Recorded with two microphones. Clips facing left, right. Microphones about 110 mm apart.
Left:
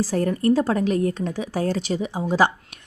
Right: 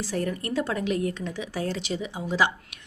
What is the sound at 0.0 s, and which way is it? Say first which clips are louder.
Speech: left 8 dB; 40° left (ahead or behind).